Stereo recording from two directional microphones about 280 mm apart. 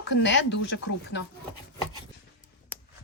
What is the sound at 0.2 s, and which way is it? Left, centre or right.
Speech, left.